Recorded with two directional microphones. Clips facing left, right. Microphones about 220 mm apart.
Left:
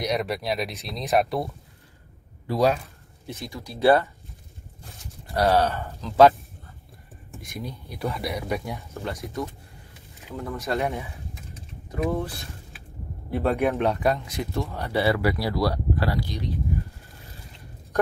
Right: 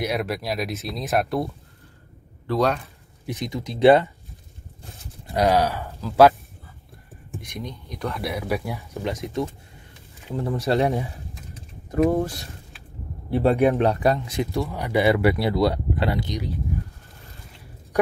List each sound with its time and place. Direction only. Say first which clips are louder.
0.0 s speech: right 1 dB; 5° right (ahead or behind)
2.4 s speech: even; 10° left (ahead or behind)
3.3 s speech: right 6 dB; 15° right (ahead or behind)
5.8 s speech: right 1 dB; centre (ahead or behind)
7.3 s speech: right 1 dB; centre (ahead or behind)
8.9 s speech: right 6 dB; 15° right (ahead or behind)
10.3 s speech: right 6 dB; 30° right (ahead or behind)
11.9 s speech: right 6 dB; 45° right (ahead or behind)
13.3 s speech: right 5 dB; 30° right (ahead or behind)
14.7 s speech: right 3 dB; 15° right (ahead or behind)